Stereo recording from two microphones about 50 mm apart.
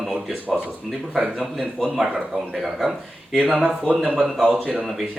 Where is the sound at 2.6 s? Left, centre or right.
Centre.